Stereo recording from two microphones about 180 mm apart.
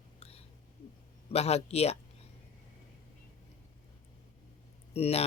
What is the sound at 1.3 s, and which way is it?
Speech, 35° left (ahead or behind).